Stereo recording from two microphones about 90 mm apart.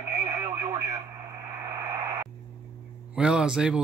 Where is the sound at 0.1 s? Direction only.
30° right (ahead or behind).